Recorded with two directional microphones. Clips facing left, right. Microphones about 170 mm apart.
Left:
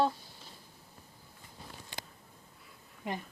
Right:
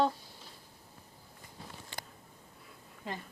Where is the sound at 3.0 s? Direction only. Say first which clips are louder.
Left 3 dB; 20° left (ahead or behind).